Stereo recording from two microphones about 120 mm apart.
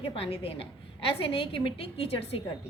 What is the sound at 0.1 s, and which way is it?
A woman's voice, 55° left (ahead or behind).